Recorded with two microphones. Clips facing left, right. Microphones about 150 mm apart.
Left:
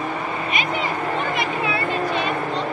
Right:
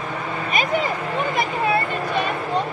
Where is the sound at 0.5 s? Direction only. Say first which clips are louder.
Right 5 dB; 40° right (ahead or behind).